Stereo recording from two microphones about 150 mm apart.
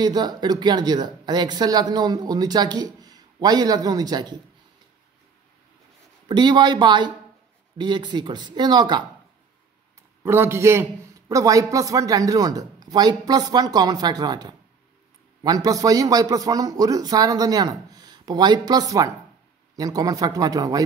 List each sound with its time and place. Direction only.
0.0 s speech: 25° right (ahead or behind)
6.2 s speech: 30° right (ahead or behind)
10.2 s speech: 15° right (ahead or behind)